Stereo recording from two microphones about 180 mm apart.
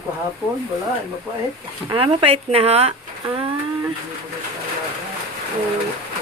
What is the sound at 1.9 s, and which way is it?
Speech, 30° right (ahead or behind).